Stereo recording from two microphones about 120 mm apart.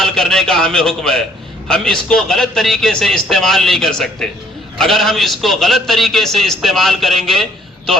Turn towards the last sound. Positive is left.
turn(degrees=0)  # may be behind; listen again after turning